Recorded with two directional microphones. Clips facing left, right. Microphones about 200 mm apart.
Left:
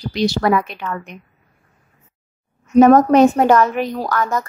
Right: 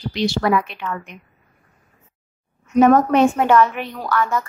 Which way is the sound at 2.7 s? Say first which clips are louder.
Left 4 dB; 40° left (ahead or behind).